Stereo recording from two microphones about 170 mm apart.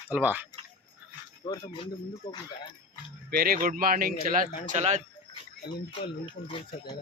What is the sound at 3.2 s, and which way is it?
Speech, 65° right (ahead or behind).